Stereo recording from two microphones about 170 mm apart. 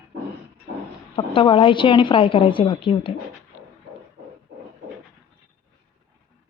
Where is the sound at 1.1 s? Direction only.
30° left (ahead or behind).